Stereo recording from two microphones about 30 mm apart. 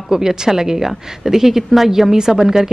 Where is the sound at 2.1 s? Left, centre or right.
Right.